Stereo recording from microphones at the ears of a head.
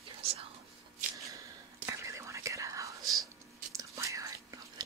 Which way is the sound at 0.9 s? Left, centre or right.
Right.